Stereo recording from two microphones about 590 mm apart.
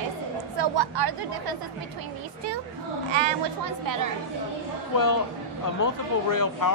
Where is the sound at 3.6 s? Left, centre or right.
Right.